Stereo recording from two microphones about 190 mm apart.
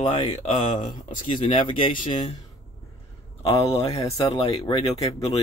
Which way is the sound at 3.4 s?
30° left (ahead or behind).